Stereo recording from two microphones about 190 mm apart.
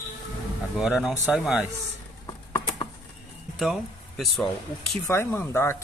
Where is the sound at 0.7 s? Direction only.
5° right (ahead or behind).